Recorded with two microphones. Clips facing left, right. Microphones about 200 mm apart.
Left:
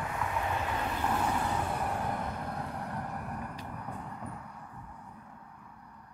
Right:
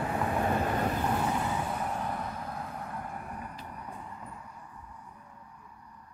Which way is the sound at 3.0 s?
65° left (ahead or behind).